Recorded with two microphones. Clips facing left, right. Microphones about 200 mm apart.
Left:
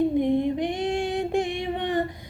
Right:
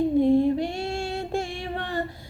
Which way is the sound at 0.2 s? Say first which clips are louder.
Right 3 dB; 20° left (ahead or behind).